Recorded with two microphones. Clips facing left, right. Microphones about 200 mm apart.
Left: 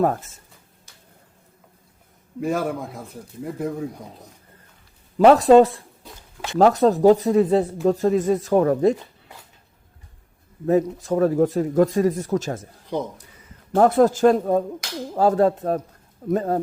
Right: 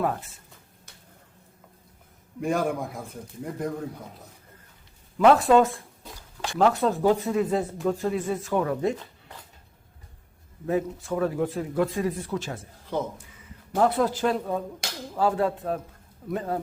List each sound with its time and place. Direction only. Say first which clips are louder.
0.0 s speech: left 6 dB; 45° left (ahead or behind)
2.4 s a man's voice: left 2 dB; centre (ahead or behind)
5.1 s speech: left 6 dB; 35° left (ahead or behind)
6.1 s a sound: left 3 dB; 20° left (ahead or behind)
6.6 s speech: left 6 dB; 40° left (ahead or behind)
10.7 s speech: left 7 dB; 40° left (ahead or behind)
12.9 s speech: left 2 dB; 15° left (ahead or behind)
13.7 s speech: left 7 dB; 45° left (ahead or behind)